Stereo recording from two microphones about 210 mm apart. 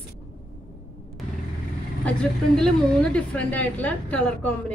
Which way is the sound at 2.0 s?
5° left (ahead or behind).